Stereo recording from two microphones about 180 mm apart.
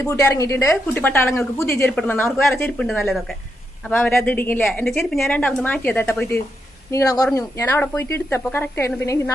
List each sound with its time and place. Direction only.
0.0 s a woman's voice: 15° left (ahead or behind)
3.8 s a woman's voice: 5° left (ahead or behind)